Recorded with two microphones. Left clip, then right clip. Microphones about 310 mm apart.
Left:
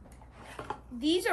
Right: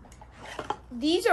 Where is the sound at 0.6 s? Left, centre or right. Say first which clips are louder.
Right 6 dB; right.